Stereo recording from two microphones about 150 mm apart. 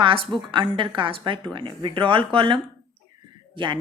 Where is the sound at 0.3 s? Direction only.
Centre (ahead or behind).